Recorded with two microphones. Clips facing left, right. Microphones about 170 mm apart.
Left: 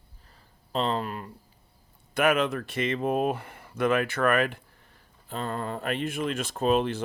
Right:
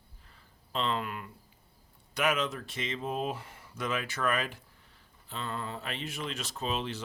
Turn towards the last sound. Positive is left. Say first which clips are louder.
# left 10 dB
turn(degrees=50)  # may be behind; listen again after turning